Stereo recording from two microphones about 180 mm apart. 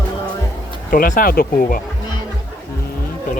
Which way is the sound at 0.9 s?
50° left (ahead or behind).